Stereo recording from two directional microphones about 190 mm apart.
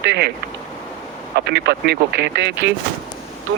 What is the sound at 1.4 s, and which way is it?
Speech, 60° right (ahead or behind).